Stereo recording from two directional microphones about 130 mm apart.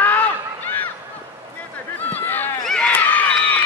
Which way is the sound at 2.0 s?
15° left (ahead or behind).